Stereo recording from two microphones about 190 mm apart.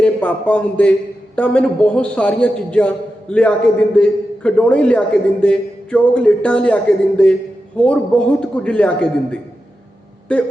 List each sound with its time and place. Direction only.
0.0 s a man's voice: 10° left (ahead or behind)